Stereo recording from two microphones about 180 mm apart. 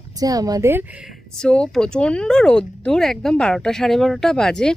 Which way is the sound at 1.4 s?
5° left (ahead or behind).